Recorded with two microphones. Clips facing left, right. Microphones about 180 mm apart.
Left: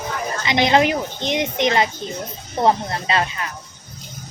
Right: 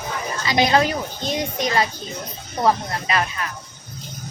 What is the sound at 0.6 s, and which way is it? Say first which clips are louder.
A woman's voice: left 3 dB; 20° left (ahead or behind).